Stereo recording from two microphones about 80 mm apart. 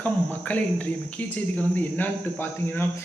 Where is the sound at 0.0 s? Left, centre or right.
Left.